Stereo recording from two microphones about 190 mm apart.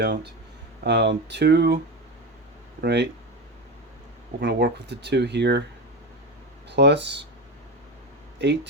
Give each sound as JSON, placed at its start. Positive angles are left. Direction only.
{"t": 0.0, "sound": "speech", "side_deg": -60}
{"t": 2.8, "sound": "speech", "side_deg": -65}
{"t": 4.4, "sound": "speech", "side_deg": -65}
{"t": 6.7, "sound": "speech", "side_deg": -65}
{"t": 8.4, "sound": "speech", "side_deg": -65}